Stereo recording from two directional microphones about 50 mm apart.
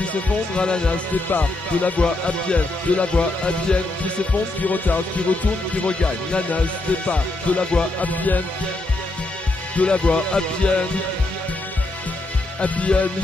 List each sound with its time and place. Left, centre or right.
0.6 s speech: centre
1.3 s speech: left
4.6 s music: left
5.9 s speech: left
7.1 s music: left
9.8 s speech: left
12.5 s speech: left